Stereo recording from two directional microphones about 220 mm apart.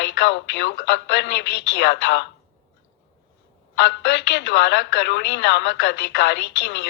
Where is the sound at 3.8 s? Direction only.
55° left (ahead or behind).